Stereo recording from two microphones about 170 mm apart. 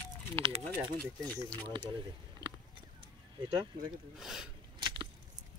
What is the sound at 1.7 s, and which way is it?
Speech, 30° right (ahead or behind).